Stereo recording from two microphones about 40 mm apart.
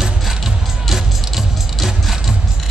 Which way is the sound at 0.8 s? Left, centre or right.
Centre.